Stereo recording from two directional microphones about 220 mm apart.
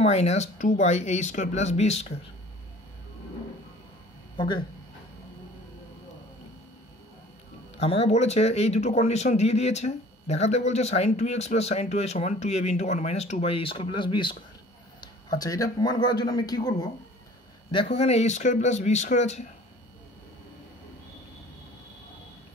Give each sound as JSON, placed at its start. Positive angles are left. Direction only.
{"t": 0.0, "sound": "speech", "side_deg": 30}
{"t": 4.4, "sound": "speech", "side_deg": 20}
{"t": 7.7, "sound": "speech", "side_deg": 30}